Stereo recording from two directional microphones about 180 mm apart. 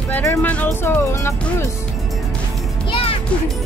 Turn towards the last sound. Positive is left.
turn(degrees=30)  # may be behind; listen again after turning